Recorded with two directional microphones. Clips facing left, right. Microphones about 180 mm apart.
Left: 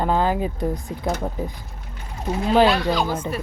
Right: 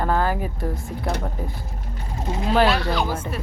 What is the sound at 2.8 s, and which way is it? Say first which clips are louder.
Speech: left 2 dB; 15° left (ahead or behind).